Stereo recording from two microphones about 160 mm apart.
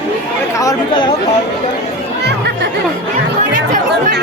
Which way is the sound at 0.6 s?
25° left (ahead or behind).